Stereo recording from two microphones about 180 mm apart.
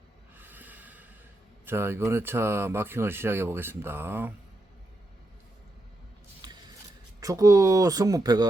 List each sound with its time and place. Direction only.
0.3 s snort: 10° right (ahead or behind)
1.6 s speech: 15° right (ahead or behind)
6.4 s a sound: 25° right (ahead or behind)
7.2 s speech: 20° right (ahead or behind)